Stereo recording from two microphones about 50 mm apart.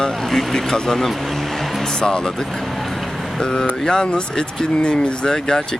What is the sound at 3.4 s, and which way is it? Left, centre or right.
Speech, centre.